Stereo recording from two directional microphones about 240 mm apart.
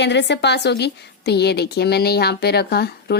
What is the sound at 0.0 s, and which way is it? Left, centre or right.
Speech, left.